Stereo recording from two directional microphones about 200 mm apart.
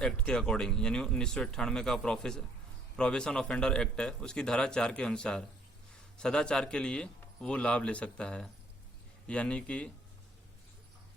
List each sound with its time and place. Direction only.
0.0 s a man's voice: 5° left (ahead or behind)